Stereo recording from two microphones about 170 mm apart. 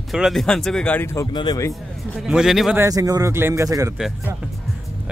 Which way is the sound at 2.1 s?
5° right (ahead or behind).